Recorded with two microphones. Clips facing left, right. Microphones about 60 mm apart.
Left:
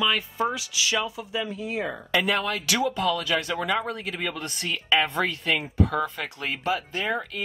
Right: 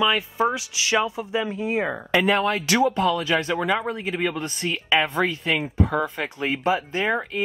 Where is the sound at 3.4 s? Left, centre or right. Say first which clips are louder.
Right 3 dB; centre.